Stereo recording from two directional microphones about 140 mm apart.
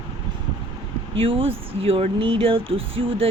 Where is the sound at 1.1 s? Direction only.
40° right (ahead or behind).